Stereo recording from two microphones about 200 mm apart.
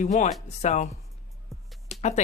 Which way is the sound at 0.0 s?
40° left (ahead or behind).